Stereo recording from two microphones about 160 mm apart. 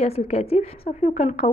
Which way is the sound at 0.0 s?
40° left (ahead or behind).